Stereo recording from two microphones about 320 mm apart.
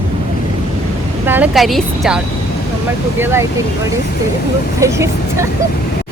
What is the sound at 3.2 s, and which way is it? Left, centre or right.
Speech, centre.